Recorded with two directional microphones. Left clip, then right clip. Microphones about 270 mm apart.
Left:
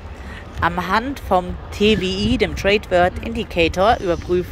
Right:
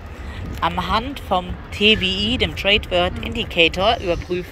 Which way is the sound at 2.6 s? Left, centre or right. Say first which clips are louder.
Left 2 dB; left.